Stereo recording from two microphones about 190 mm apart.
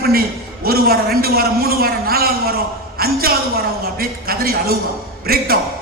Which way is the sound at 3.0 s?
50° right (ahead or behind).